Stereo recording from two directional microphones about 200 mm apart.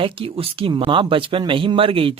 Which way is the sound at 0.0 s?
25° right (ahead or behind).